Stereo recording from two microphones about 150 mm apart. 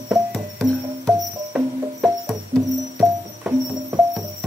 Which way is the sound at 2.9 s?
20° right (ahead or behind).